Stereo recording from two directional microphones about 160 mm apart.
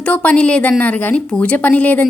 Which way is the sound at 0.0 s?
10° left (ahead or behind).